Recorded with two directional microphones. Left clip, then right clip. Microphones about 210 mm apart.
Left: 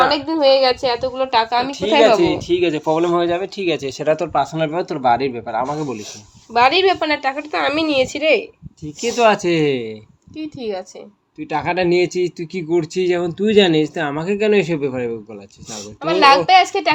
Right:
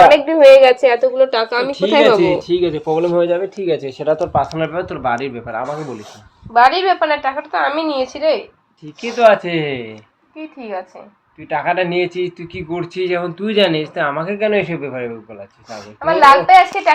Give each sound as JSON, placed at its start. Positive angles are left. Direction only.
{"t": 0.1, "sound": "a woman's voice", "side_deg": 25}
{"t": 0.8, "sound": "a woman's voice", "side_deg": 10}
{"t": 2.6, "sound": "speech", "side_deg": 50}
{"t": 3.9, "sound": "speech", "side_deg": 50}
{"t": 6.5, "sound": "a woman's voice", "side_deg": 20}
{"t": 9.0, "sound": "speech", "side_deg": 60}
{"t": 10.6, "sound": "a woman's voice", "side_deg": 30}
{"t": 11.3, "sound": "speech", "side_deg": 60}
{"t": 16.0, "sound": "a woman's voice", "side_deg": 25}